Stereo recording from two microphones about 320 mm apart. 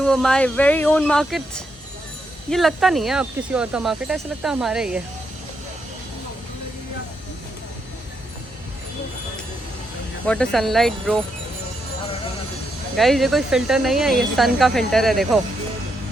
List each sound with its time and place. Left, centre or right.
0.0 s speech: centre
10.2 s speech: centre
13.0 s speech: centre